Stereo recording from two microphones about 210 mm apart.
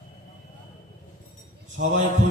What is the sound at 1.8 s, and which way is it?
Speech, 50° right (ahead or behind).